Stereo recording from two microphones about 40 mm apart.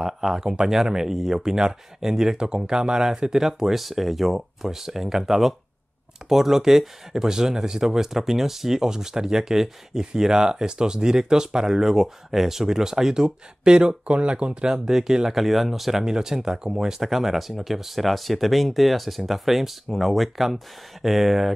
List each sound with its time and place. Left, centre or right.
0.0 s speech: centre
17.0 s speech: centre